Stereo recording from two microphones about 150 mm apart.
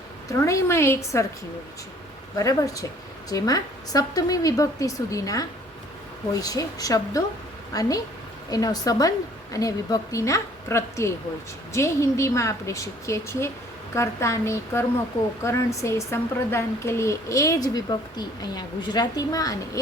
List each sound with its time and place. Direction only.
0.3 s speech: 20° left (ahead or behind)
2.4 s a woman's voice: 20° left (ahead or behind)